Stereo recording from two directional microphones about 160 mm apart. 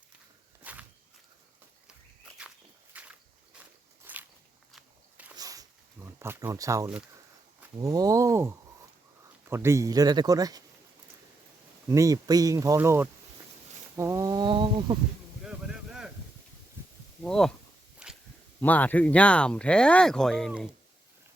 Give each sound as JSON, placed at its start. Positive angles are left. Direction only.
{"t": 0.6, "sound": "walk", "side_deg": -10}
{"t": 2.9, "sound": "walk", "side_deg": -10}
{"t": 5.4, "sound": "a sound", "side_deg": -20}
{"t": 7.8, "sound": "speech", "side_deg": -20}
{"t": 11.9, "sound": "speech", "side_deg": -20}
{"t": 13.9, "sound": "a sound", "side_deg": -15}
{"t": 15.4, "sound": "boat", "side_deg": -5}
{"t": 17.2, "sound": "speech", "side_deg": 5}
{"t": 18.0, "sound": "a sound", "side_deg": -5}
{"t": 18.6, "sound": "speech", "side_deg": 10}